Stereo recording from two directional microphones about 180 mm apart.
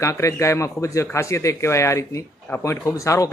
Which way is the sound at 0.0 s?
15° left (ahead or behind).